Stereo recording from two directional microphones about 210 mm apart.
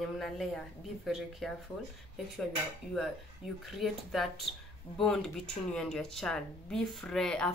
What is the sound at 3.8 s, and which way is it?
Speech, centre (ahead or behind).